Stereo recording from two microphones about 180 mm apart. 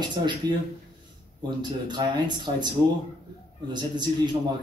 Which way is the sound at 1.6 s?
25° right (ahead or behind).